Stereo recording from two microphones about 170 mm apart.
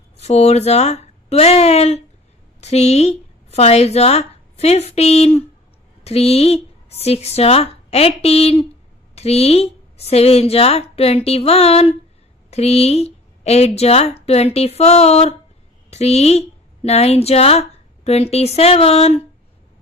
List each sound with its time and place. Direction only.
0.2 s a woman's voice: 40° left (ahead or behind)